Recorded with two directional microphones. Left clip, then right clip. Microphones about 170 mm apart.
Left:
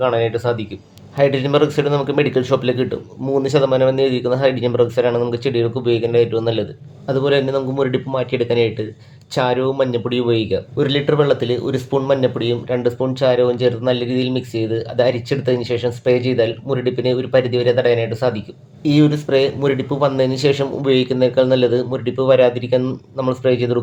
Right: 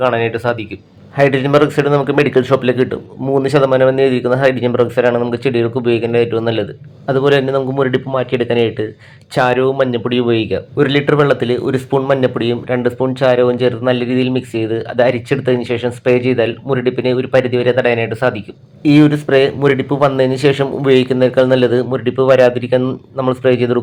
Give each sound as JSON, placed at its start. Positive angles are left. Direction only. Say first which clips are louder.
{"t": 0.0, "sound": "speech", "louder": "right 2 dB", "side_deg": -15}